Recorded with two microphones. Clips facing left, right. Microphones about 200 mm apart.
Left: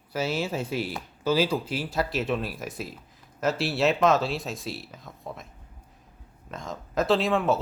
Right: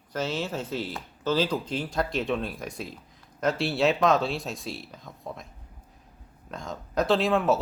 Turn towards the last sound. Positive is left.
turn(degrees=0)  # may be behind; listen again after turning